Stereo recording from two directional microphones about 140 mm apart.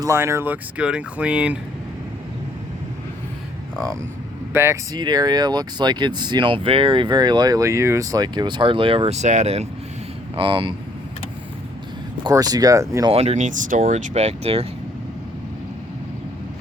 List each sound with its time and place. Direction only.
0.0 s speech: 20° right (ahead or behind)
4.5 s speech: 20° right (ahead or behind)
4.9 s speech: 30° right (ahead or behind); by 9.6 s 50° right (ahead or behind)
10.3 s speech: 35° right (ahead or behind)
12.2 s speech: 25° right (ahead or behind)
13.1 s speech: 50° right (ahead or behind)